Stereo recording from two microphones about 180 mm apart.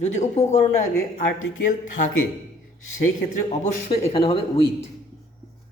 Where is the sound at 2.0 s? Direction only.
50° left (ahead or behind).